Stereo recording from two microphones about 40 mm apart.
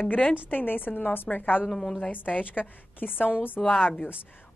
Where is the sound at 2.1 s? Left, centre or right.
Left.